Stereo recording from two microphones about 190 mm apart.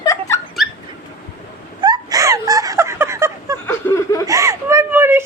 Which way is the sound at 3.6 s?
10° left (ahead or behind).